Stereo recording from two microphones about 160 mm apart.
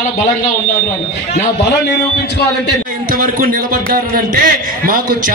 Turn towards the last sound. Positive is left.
turn(degrees=-65)  # may be behind; listen again after turning